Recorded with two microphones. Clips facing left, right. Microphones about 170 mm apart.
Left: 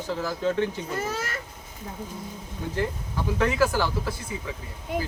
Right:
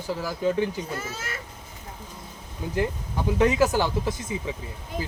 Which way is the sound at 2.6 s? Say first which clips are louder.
Right 2 dB; 10° right (ahead or behind).